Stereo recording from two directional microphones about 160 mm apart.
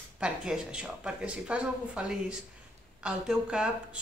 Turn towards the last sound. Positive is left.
turn(degrees=-5)  # may be behind; listen again after turning